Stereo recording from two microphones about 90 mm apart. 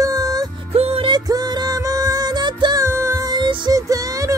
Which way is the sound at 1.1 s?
45° right (ahead or behind).